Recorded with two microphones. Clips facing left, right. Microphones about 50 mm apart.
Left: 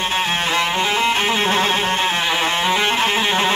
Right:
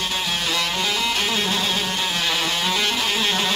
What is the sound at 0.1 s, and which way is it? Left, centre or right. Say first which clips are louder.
Music: left 5 dB; left.